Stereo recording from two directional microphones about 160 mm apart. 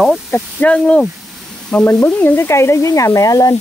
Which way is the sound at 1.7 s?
10° left (ahead or behind).